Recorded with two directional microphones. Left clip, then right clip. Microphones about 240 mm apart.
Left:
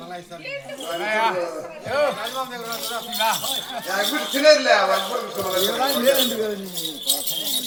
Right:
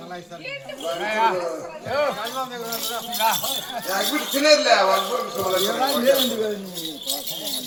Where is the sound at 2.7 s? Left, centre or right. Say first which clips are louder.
Even; right.